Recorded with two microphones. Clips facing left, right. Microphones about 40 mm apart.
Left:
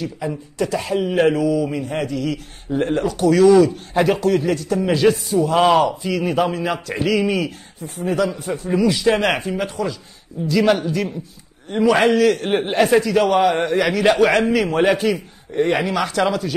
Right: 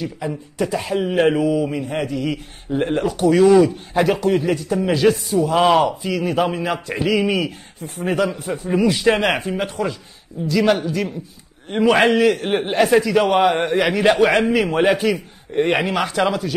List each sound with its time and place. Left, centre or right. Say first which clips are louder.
0.3 s a man's voice: even; centre
1.3 s a man's voice: even; right
1.7 s a man's voice: even; centre
3.9 s a man's voice: even; centre
7.8 s a man's voice: even; right
8.7 s a man's voice: even; right
9.2 s a man's voice: even; centre
9.8 s a man's voice: right 1 dB; right
10.4 s a man's voice: left 1 dB; centre
11.7 s a man's voice: even; right
12.3 s a man's voice: even; centre
15.5 s a man's voice: even; centre
16.1 s a man's voice: even; centre